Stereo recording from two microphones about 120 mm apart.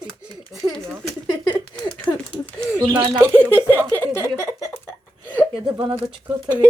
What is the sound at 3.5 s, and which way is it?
Speech, 20° right (ahead or behind).